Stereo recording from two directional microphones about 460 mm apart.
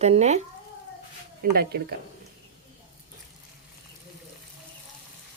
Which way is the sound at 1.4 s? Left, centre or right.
Centre.